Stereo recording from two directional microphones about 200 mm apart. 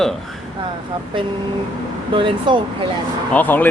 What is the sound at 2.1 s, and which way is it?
Speech, 25° right (ahead or behind).